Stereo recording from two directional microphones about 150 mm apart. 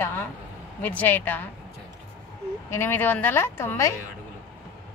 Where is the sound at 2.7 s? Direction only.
15° left (ahead or behind).